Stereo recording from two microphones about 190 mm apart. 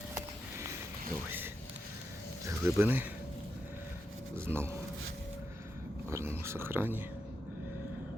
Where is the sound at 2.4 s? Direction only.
15° right (ahead or behind).